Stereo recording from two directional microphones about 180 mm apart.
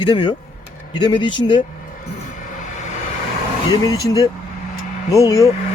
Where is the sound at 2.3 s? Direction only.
45° left (ahead or behind).